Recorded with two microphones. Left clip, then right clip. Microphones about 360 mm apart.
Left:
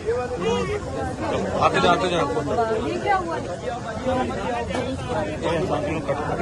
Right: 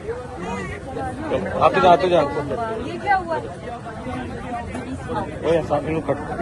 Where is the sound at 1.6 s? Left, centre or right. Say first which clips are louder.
Right 5 dB; centre.